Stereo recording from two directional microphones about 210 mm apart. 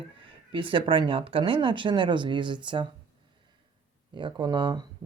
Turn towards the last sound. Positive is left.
turn(degrees=-20)  # may be behind; listen again after turning